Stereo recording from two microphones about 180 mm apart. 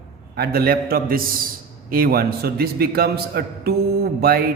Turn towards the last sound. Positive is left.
turn(degrees=-55)  # may be behind; listen again after turning